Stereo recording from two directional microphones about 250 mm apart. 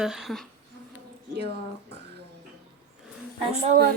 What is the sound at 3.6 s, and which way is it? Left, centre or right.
Speech, right.